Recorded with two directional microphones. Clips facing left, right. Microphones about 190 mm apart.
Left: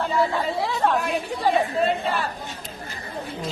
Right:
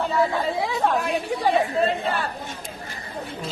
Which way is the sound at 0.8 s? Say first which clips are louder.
Left 1 dB; centre (ahead or behind).